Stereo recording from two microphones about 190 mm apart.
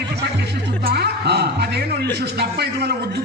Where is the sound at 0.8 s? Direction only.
60° right (ahead or behind).